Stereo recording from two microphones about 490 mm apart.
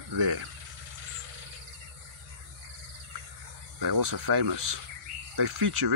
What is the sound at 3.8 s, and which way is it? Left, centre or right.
Speech, right.